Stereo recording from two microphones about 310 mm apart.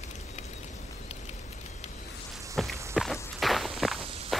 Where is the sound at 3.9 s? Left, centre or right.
Centre.